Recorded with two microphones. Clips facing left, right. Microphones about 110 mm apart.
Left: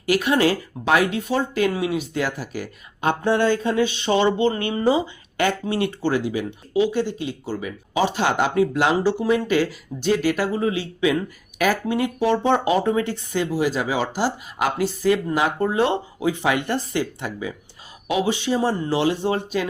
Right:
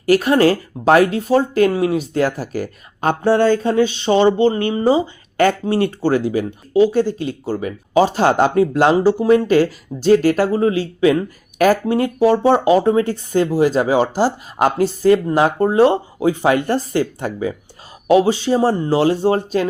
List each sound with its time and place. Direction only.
0.0 s speech: 40° right (ahead or behind)